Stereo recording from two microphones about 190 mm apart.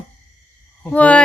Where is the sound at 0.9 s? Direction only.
5° left (ahead or behind).